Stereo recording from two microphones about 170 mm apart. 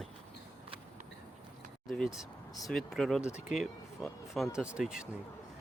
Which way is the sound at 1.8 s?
Centre (ahead or behind).